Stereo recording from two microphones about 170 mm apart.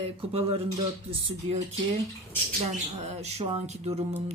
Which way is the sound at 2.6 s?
40° right (ahead or behind).